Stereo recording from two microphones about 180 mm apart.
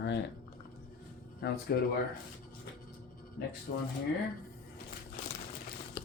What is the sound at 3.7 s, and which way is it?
Speech, 55° left (ahead or behind).